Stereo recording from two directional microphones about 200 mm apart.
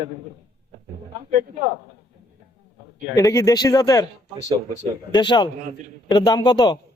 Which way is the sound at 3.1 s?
15° left (ahead or behind).